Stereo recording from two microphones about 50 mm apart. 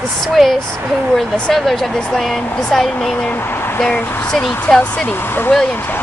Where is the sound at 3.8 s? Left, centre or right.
Left.